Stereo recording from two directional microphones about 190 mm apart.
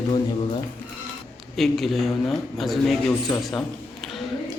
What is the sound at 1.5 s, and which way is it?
Speech, centre (ahead or behind).